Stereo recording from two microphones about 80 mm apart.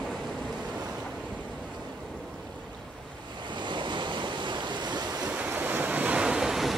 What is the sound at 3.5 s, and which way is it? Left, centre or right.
Waves, right.